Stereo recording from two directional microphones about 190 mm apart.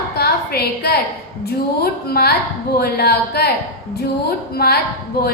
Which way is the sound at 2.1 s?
55° left (ahead or behind).